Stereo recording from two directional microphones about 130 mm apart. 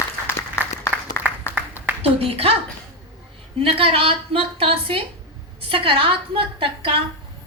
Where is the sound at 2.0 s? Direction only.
50° right (ahead or behind).